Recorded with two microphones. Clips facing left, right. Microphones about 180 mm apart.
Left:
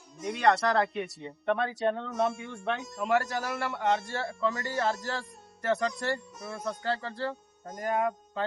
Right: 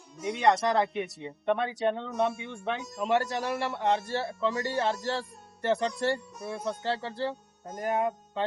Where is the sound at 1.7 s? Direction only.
Centre (ahead or behind).